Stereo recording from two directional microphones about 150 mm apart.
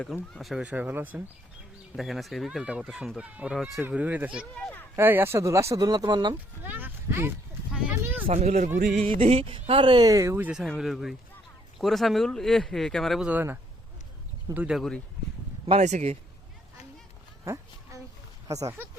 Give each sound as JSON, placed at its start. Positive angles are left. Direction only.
{"t": 0.0, "sound": "speech", "side_deg": 0}
{"t": 4.5, "sound": "speech", "side_deg": 5}
{"t": 4.9, "sound": "speech", "side_deg": -15}
{"t": 6.3, "sound": "speech", "side_deg": -10}
{"t": 7.8, "sound": "a sound", "side_deg": -10}
{"t": 8.3, "sound": "speech", "side_deg": -50}
{"t": 8.8, "sound": "music", "side_deg": -55}
{"t": 9.0, "sound": "speech", "side_deg": -40}
{"t": 10.6, "sound": "speech", "side_deg": 0}
{"t": 14.8, "sound": "speech", "side_deg": 5}
{"t": 15.6, "sound": "speech", "side_deg": -45}
{"t": 17.4, "sound": "a sound", "side_deg": -20}
{"t": 18.4, "sound": "speech", "side_deg": -20}